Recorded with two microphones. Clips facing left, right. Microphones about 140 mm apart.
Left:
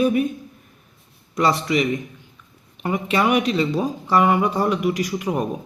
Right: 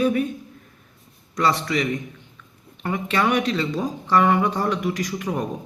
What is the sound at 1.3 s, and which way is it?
Speech, 15° left (ahead or behind).